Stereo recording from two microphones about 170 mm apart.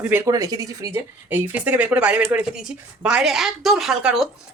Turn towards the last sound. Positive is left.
turn(degrees=-5)  # may be behind; listen again after turning